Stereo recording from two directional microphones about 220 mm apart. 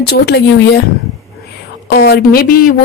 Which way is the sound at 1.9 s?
45° left (ahead or behind).